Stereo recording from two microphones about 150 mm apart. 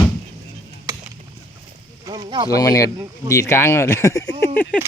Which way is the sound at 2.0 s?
30° right (ahead or behind).